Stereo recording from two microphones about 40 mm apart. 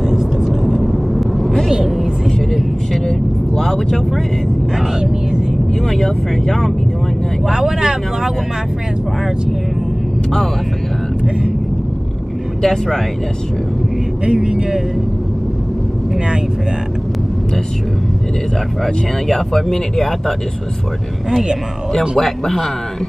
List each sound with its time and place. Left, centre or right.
0.0 s vehicle: centre
0.5 s vehicle: centre
3.5 s vehicle: centre
4.7 s a sound: centre
5.8 s speech: centre
7.4 s speech: centre
11.2 s vehicle: centre
12.6 s speech: centre
14.2 s speech: centre
18.8 s speech: centre
21.3 s speech: centre
22.1 s speech: centre